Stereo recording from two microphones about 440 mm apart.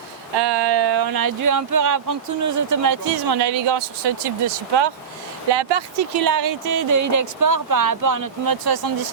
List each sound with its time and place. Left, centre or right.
0.3 s speech: right